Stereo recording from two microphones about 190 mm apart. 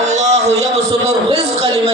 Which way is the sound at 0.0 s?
35° right (ahead or behind).